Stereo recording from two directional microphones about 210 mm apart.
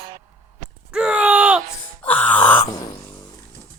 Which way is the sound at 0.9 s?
5° right (ahead or behind).